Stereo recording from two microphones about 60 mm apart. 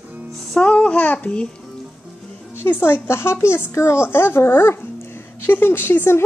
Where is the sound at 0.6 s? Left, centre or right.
Centre.